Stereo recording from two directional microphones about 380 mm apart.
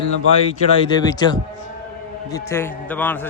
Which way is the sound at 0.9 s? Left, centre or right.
Centre.